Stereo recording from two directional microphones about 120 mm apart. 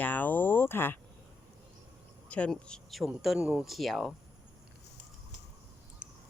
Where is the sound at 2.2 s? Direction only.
10° left (ahead or behind).